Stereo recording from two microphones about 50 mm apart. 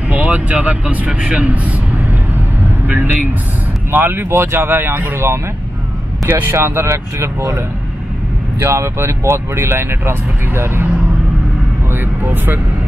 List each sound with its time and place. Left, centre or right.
0.1 s vehicle: right
3.9 s speech: right
8.5 s speech: right
11.9 s speech: right